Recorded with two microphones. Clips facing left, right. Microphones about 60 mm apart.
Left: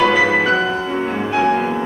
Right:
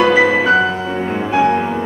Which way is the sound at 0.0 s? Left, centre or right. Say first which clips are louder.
Right 2 dB; centre.